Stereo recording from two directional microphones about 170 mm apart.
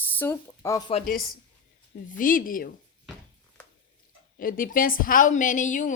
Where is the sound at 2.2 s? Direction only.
55° left (ahead or behind).